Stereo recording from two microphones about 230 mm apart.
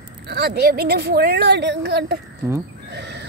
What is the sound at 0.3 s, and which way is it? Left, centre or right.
A woman's voice, right.